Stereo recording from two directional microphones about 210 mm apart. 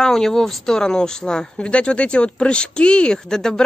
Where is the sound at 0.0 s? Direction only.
Centre (ahead or behind).